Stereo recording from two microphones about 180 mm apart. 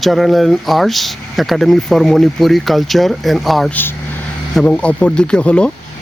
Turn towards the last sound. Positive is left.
turn(degrees=5)  # may be behind; listen again after turning